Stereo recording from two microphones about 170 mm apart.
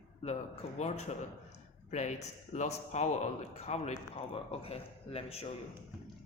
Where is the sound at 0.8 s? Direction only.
40° left (ahead or behind).